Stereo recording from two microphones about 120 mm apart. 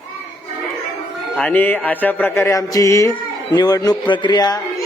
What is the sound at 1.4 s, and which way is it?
Mantra, 15° left (ahead or behind).